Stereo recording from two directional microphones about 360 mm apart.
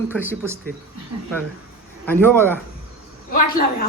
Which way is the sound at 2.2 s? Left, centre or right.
Centre.